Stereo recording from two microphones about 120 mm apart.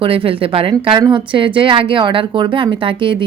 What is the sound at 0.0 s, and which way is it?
A woman's voice, 50° right (ahead or behind).